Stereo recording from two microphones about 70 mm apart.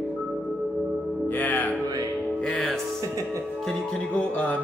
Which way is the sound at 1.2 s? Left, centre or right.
Left.